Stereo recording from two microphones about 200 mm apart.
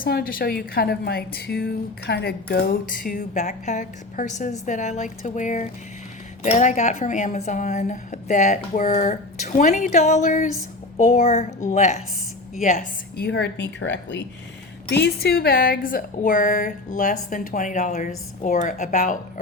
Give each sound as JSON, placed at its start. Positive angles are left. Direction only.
{"t": 0.0, "sound": "a woman's voice", "side_deg": 50}
{"t": 13.2, "sound": "a woman's voice", "side_deg": 60}
{"t": 15.0, "sound": "a woman's voice", "side_deg": 50}